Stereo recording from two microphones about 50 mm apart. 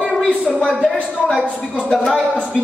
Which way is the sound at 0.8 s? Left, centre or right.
Left.